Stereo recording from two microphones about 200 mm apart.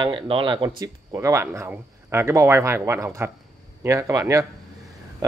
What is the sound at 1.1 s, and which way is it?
Speech, 15° right (ahead or behind).